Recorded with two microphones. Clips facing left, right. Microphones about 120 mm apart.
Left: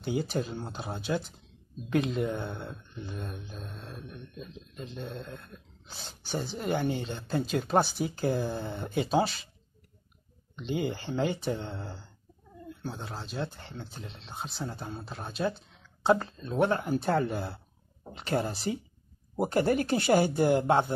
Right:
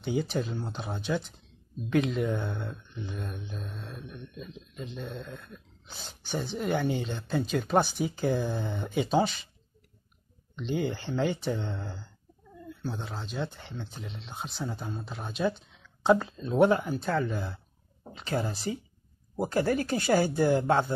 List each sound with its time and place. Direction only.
0.0 s mantra: 5° left (ahead or behind)
10.5 s mantra: 5° left (ahead or behind)
14.9 s speech: 10° left (ahead or behind)
15.1 s mantra: centre (ahead or behind)
15.7 s a sound: centre (ahead or behind)
16.3 s speech: 15° right (ahead or behind)
17.2 s speech: 35° left (ahead or behind)